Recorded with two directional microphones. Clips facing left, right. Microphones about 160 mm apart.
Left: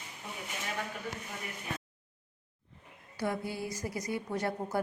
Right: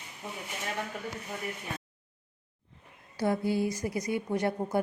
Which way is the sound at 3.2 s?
30° right (ahead or behind).